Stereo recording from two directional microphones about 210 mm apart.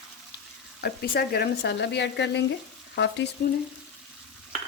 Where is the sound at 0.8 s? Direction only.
45° left (ahead or behind).